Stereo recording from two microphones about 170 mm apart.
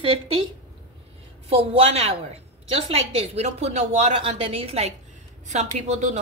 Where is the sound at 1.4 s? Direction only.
35° right (ahead or behind).